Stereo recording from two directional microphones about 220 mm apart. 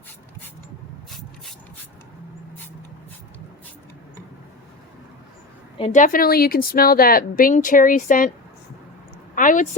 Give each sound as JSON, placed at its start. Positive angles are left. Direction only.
{"t": 5.8, "sound": "a woman's voice", "side_deg": 35}
{"t": 9.3, "sound": "a woman's voice", "side_deg": 35}